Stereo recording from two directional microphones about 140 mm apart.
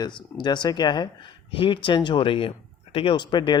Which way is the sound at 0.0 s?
30° left (ahead or behind).